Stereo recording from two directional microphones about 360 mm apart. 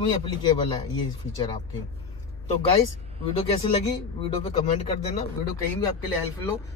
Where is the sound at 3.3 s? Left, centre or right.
Centre.